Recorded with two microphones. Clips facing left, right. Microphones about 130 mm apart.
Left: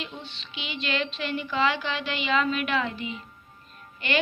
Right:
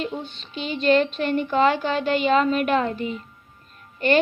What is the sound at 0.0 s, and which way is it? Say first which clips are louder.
A woman's voice: right 9 dB; 45° right (ahead or behind).